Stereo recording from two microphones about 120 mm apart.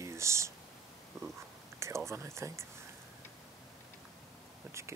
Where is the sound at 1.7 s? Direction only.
25° right (ahead or behind).